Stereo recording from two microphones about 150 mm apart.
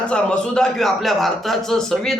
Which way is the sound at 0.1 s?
5° left (ahead or behind).